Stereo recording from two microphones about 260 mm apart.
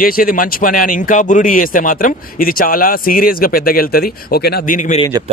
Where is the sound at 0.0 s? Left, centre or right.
Left.